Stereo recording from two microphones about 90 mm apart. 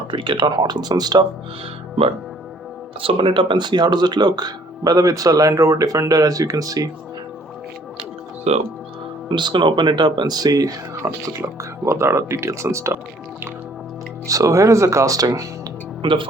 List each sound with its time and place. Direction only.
0.1 s speech: 70° right (ahead or behind); by 1.3 s 50° right (ahead or behind)
3.0 s speech: 80° right; by 6.9 s 40° right (ahead or behind)
9.3 s speech: 60° right (ahead or behind); by 10.8 s 45° right (ahead or behind)
11.0 s speech: 30° right (ahead or behind)
14.3 s speech: 40° right (ahead or behind)
16.0 s speech: 70° right (ahead or behind)